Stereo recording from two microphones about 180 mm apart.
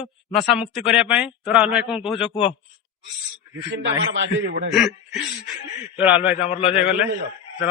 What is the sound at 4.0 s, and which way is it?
Speech, 90° right.